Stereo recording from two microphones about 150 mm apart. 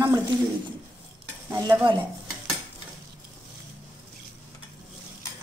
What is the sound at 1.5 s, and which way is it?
Speech, 15° right (ahead or behind).